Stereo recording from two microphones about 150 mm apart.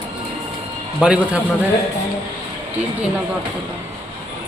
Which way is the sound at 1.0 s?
5° right (ahead or behind).